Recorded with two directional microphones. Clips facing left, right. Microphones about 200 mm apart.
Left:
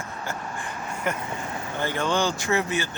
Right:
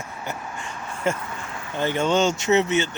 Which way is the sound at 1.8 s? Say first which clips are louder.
Right 4 dB; 20° right (ahead or behind).